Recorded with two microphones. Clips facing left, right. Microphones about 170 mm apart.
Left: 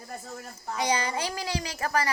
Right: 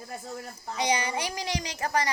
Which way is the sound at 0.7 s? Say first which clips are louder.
Even; 20° right (ahead or behind).